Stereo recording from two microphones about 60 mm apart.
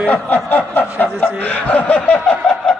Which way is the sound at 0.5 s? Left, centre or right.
Left.